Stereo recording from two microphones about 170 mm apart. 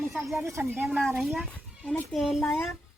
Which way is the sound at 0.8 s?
Centre (ahead or behind).